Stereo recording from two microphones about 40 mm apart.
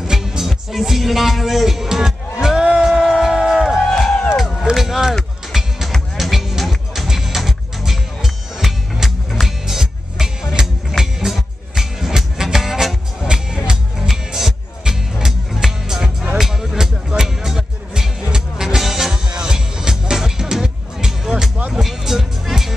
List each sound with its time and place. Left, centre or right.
0.0 s music: centre
0.5 s speech: centre
2.6 s music: right
3.1 s a sound: centre
3.8 s music: centre
4.7 s a sound: centre
5.5 s music: centre
13.3 s music: centre
19.2 s music: centre